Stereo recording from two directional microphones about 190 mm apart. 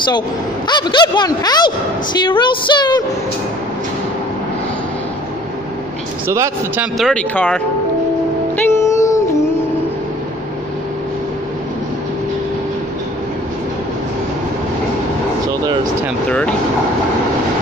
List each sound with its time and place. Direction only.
0.7 s speech: 25° left (ahead or behind)
6.2 s speech: 15° right (ahead or behind)
7.0 s speech: 5° left (ahead or behind)
8.7 s music: 15° left (ahead or behind)
16.3 s speech: 5° left (ahead or behind)